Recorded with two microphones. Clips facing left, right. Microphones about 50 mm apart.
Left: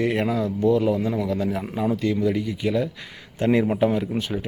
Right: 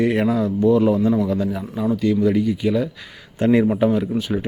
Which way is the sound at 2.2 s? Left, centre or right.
Centre.